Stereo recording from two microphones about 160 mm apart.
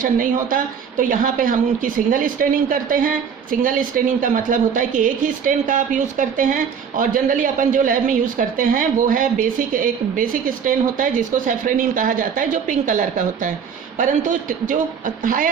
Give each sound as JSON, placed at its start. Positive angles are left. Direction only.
{"t": 0.0, "sound": "a woman's voice", "side_deg": -60}